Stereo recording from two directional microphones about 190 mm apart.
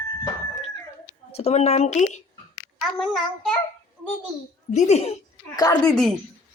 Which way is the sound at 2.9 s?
5° left (ahead or behind).